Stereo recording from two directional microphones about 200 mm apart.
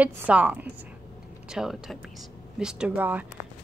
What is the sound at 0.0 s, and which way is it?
A woman's voice, 5° right (ahead or behind).